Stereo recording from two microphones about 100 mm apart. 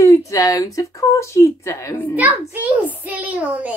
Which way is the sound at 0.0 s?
30° left (ahead or behind).